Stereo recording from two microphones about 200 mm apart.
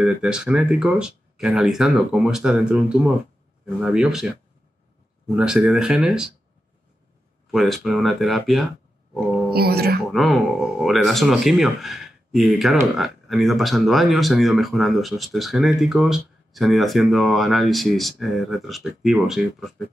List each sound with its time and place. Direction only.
0.0 s speech: 5° right (ahead or behind)
5.3 s speech: 5° right (ahead or behind)
7.5 s speech: centre (ahead or behind)
9.5 s speech: 50° right (ahead or behind)
10.1 s speech: centre (ahead or behind)